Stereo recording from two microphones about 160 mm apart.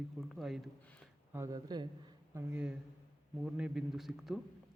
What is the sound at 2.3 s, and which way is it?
A man's voice, 10° right (ahead or behind).